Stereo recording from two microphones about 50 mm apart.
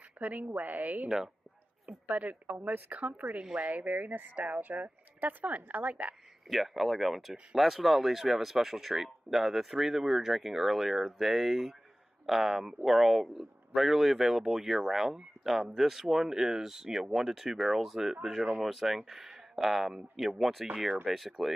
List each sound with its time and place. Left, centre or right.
0.2 s speech: right
1.0 s speech: centre
2.1 s speech: right
6.5 s speech: centre